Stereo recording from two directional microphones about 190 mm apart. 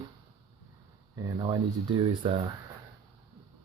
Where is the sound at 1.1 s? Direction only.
20° right (ahead or behind).